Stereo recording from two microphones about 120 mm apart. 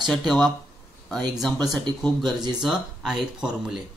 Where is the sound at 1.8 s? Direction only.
10° left (ahead or behind).